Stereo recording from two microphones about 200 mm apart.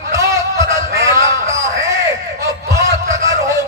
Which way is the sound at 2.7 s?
15° right (ahead or behind).